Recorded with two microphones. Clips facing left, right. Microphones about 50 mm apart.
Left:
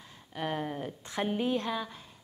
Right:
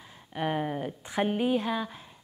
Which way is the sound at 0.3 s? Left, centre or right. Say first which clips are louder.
Right 4 dB; centre.